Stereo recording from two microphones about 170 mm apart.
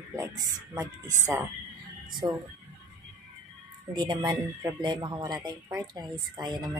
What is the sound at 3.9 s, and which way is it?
A woman's voice, 25° right (ahead or behind).